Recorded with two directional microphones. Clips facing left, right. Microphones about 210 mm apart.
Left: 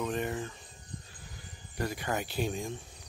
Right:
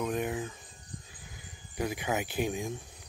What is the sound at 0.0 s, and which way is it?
Cricket, 10° right (ahead or behind).